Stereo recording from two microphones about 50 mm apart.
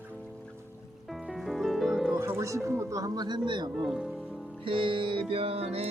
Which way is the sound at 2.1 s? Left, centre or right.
Right.